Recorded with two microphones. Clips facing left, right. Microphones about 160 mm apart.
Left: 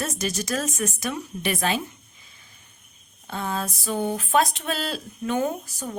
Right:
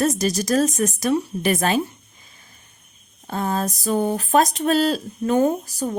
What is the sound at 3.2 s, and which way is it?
A woman's voice, 45° right (ahead or behind).